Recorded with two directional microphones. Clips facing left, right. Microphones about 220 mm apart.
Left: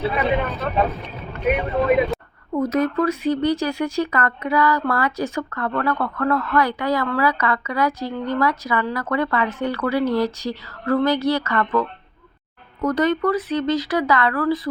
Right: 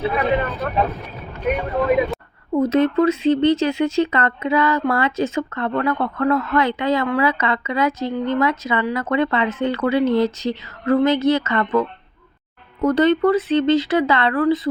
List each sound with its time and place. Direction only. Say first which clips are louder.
0.2 s speech: right 1 dB; centre (ahead or behind)
2.5 s speech: right 4 dB; 25° right (ahead or behind)